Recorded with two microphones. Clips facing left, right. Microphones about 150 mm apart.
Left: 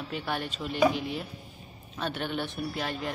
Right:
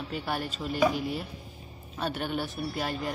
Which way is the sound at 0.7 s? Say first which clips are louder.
Left 1 dB; 45° right (ahead or behind).